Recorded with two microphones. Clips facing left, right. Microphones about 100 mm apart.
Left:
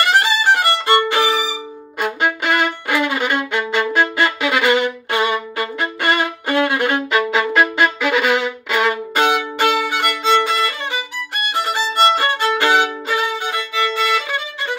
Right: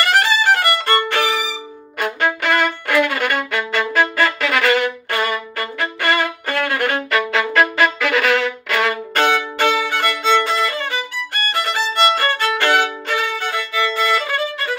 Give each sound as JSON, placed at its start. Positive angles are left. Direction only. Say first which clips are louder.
{"t": 0.0, "sound": "violin", "louder": "even", "side_deg": 15}
{"t": 1.1, "sound": "music", "louder": "left 2 dB", "side_deg": 15}
{"t": 2.0, "sound": "violin", "louder": "even", "side_deg": 10}
{"t": 13.9, "sound": "music", "louder": "right 1 dB", "side_deg": 15}